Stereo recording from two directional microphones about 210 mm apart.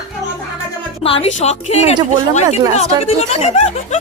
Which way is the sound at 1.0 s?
25° left (ahead or behind).